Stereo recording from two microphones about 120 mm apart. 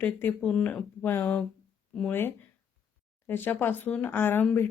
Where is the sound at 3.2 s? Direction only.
15° left (ahead or behind).